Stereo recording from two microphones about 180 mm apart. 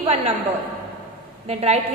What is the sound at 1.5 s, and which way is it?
Speech, 35° right (ahead or behind).